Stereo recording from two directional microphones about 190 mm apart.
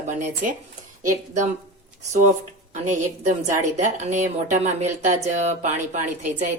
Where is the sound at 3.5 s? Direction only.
40° right (ahead or behind).